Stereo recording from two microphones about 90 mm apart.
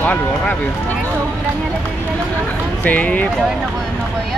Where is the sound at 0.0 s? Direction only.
20° left (ahead or behind).